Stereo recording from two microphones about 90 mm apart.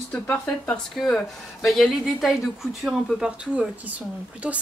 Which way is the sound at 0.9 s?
5° left (ahead or behind).